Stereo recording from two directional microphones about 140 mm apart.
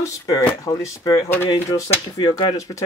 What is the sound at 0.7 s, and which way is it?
Speech, 25° left (ahead or behind).